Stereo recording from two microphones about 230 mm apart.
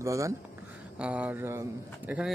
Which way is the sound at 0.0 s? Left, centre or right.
Centre.